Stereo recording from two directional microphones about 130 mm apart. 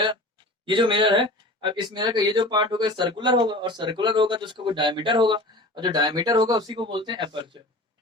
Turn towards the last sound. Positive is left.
turn(degrees=-40)  # may be behind; listen again after turning